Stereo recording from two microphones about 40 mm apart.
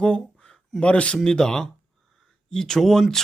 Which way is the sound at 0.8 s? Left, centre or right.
Left.